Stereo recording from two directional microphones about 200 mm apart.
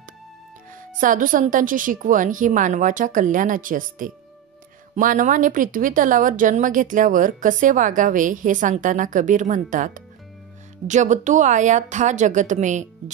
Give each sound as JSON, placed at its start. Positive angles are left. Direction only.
{"t": 0.9, "sound": "a woman's voice", "side_deg": -40}